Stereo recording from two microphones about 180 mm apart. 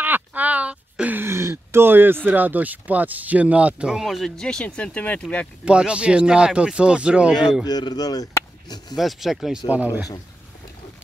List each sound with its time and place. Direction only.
0.0 s a sound: 10° right (ahead or behind)
2.2 s speech: 10° right (ahead or behind); by 5.5 s 5° left (ahead or behind)
5.7 s speech: 5° right (ahead or behind)
7.6 s speech: 20° left (ahead or behind)
8.9 s speech: centre (ahead or behind)